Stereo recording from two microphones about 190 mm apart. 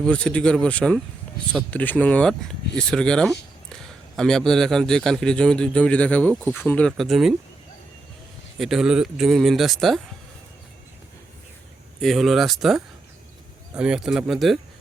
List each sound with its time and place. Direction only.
0.0 s a man's voice: 5° left (ahead or behind)
8.5 s a man's voice: centre (ahead or behind)
11.9 s a man's voice: centre (ahead or behind)